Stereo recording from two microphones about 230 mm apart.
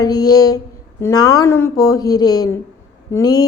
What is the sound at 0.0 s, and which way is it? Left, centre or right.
A woman's voice, centre.